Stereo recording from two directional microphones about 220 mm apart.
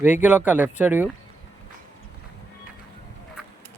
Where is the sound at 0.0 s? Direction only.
10° right (ahead or behind).